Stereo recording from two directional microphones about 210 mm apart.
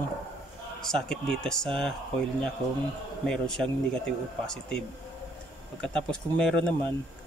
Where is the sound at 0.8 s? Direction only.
5° left (ahead or behind).